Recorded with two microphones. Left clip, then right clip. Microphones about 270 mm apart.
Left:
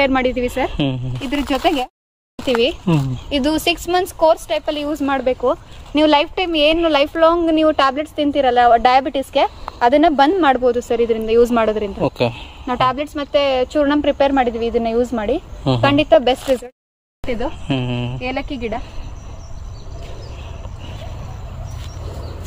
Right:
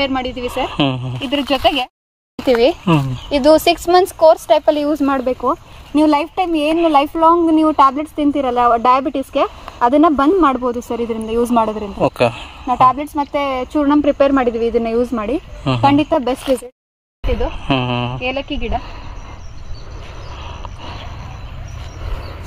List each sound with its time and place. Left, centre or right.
0.0 s speech: right
0.7 s speech: centre
1.5 s speech: centre
2.5 s speech: centre
3.3 s speech: centre
12.0 s speech: centre
12.6 s a woman's voice: right
17.5 s speech: centre
18.5 s speech: right